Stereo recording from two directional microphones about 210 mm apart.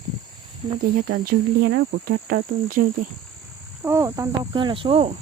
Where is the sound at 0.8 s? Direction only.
45° right (ahead or behind).